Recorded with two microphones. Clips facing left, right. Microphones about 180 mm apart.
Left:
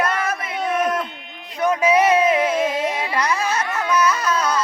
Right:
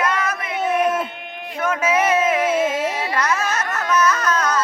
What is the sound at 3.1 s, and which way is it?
Carnatic music, 15° left (ahead or behind).